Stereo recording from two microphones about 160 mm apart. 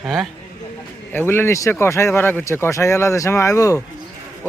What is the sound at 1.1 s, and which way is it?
Speech, 15° left (ahead or behind).